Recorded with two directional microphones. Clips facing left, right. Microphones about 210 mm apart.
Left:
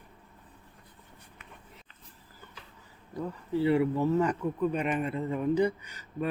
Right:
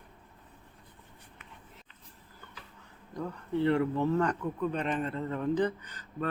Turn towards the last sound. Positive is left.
turn(degrees=10)  # may be behind; listen again after turning